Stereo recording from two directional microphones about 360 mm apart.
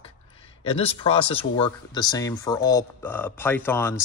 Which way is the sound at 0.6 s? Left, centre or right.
Centre.